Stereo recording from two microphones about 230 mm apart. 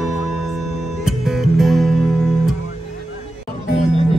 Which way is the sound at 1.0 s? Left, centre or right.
Centre.